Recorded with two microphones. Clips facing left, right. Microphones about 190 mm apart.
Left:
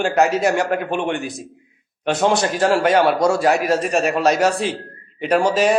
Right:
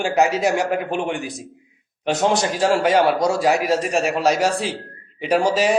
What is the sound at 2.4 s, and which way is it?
Speech, 60° left (ahead or behind).